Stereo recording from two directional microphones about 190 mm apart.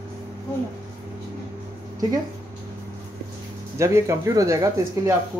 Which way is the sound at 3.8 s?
15° right (ahead or behind).